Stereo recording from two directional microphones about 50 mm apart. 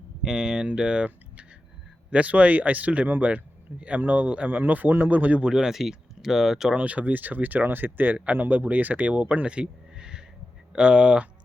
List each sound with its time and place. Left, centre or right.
0.2 s speech: centre; by 5.4 s right
5.4 s speech: centre
6.7 s speech: right